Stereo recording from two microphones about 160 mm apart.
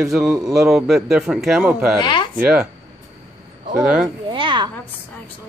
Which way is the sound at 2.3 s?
5° right (ahead or behind).